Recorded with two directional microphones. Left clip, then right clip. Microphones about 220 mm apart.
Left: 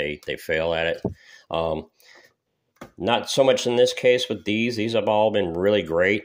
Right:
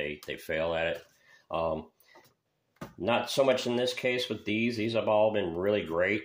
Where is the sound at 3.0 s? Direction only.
45° left (ahead or behind).